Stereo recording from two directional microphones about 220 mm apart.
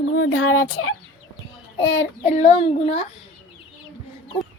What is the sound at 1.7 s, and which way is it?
Child singing, 60° left (ahead or behind).